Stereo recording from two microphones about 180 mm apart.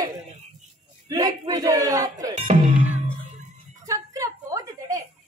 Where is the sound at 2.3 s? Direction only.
40° right (ahead or behind).